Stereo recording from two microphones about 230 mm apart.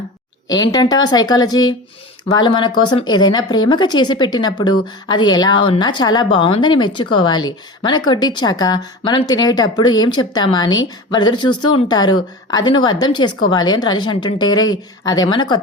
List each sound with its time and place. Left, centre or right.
0.4 s a woman's voice: centre